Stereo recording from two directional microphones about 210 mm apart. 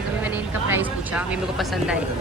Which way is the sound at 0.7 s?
10° right (ahead or behind).